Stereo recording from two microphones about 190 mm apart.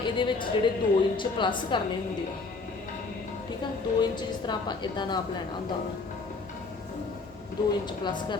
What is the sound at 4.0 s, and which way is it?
A woman's voice, 25° left (ahead or behind).